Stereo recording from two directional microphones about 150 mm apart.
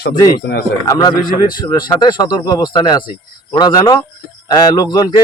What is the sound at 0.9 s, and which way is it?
Speech, 25° left (ahead or behind).